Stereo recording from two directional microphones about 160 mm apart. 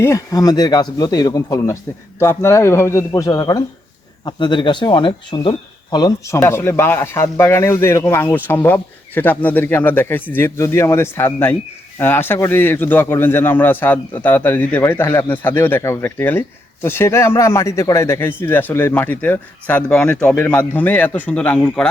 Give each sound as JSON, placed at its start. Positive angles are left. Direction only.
{"t": 0.0, "sound": "speech", "side_deg": 20}